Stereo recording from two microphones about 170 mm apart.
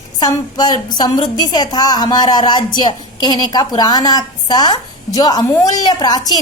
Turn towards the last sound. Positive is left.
turn(degrees=25)  # may be behind; listen again after turning